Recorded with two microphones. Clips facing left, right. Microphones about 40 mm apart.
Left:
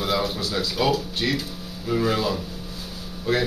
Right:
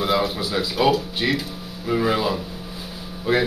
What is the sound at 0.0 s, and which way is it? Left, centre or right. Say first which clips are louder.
Speech: right 3 dB; centre.